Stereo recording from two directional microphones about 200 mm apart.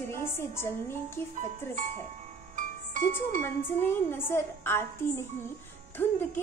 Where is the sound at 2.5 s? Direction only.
40° right (ahead or behind).